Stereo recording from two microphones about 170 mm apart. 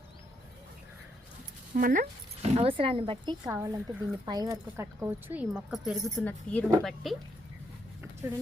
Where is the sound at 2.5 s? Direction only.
30° right (ahead or behind).